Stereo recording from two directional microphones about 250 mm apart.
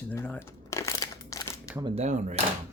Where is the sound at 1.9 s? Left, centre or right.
Right.